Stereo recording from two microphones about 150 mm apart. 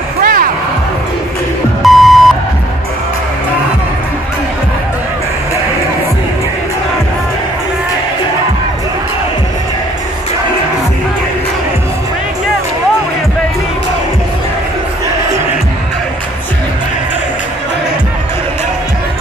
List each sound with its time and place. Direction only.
0.2 s music: 75° right (ahead or behind)
1.8 s beep: centre (ahead or behind)